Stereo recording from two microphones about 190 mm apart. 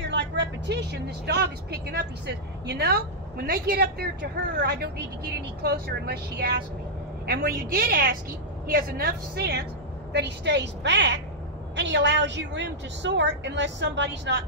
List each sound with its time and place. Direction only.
0.1 s a woman's voice: 65° right (ahead or behind)